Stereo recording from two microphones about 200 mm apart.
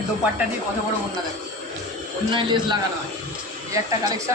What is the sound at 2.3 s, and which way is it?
A man's voice, 25° right (ahead or behind).